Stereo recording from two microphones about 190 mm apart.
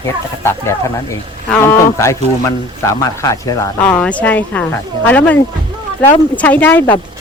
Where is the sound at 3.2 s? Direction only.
20° left (ahead or behind).